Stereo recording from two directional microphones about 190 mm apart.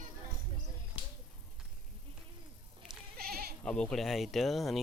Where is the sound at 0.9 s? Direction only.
30° left (ahead or behind).